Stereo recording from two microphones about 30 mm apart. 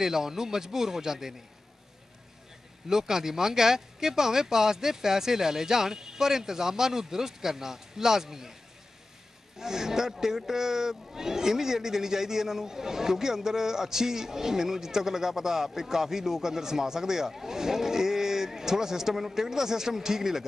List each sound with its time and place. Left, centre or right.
0.0 s speech: centre
2.9 s speech: centre
9.6 s speech: centre